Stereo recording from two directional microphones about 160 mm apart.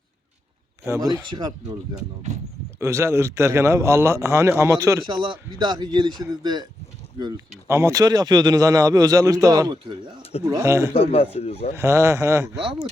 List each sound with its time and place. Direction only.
0.9 s a man's voice: 20° right (ahead or behind)
10.9 s speech: 40° left (ahead or behind)
11.7 s a man's voice: 15° right (ahead or behind)